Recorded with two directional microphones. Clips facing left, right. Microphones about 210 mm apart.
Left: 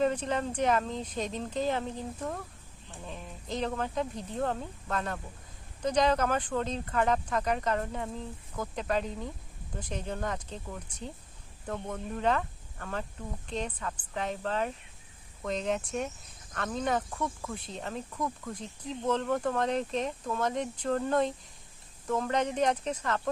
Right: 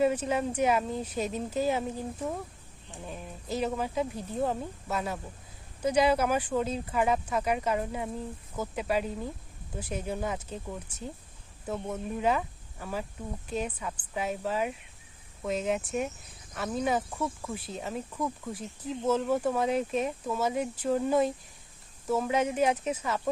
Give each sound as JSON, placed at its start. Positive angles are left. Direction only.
{"t": 0.0, "sound": "speech", "side_deg": -10}